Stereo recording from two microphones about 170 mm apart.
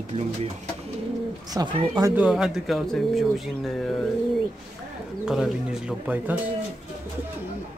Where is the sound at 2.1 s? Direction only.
5° right (ahead or behind).